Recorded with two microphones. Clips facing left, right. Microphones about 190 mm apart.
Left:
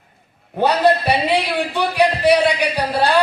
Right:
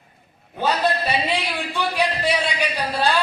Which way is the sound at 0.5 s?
65° left (ahead or behind).